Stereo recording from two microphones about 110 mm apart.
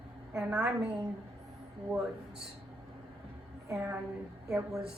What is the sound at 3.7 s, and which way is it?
Speech, 25° right (ahead or behind).